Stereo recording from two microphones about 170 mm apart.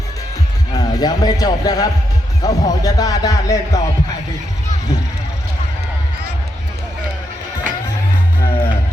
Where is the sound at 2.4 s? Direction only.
20° left (ahead or behind).